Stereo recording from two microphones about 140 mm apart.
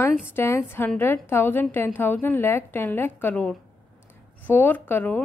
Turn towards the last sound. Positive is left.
turn(degrees=15)  # may be behind; listen again after turning